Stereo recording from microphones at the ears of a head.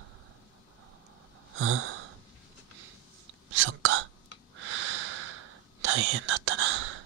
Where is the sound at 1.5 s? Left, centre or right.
Right.